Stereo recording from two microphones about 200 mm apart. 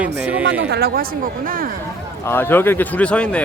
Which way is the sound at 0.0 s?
5° right (ahead or behind).